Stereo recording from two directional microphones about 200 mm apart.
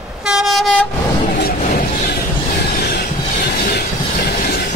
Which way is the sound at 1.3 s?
50° left (ahead or behind).